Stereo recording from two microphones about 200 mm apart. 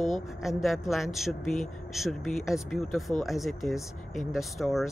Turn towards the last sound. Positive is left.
turn(degrees=0)  # may be behind; listen again after turning